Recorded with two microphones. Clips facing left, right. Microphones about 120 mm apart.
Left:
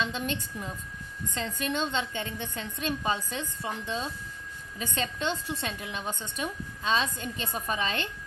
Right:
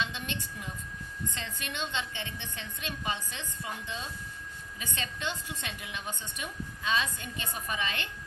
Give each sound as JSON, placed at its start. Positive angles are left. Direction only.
{"t": 0.0, "sound": "a woman's voice", "side_deg": 40}